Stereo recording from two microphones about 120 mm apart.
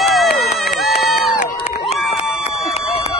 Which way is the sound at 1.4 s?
75° left (ahead or behind).